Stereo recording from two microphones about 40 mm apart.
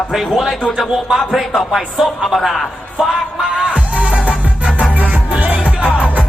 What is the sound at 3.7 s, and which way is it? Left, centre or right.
Music, right.